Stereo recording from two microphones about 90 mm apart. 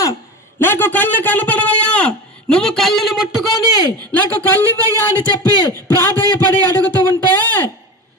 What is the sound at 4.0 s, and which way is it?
Speech, 15° left (ahead or behind).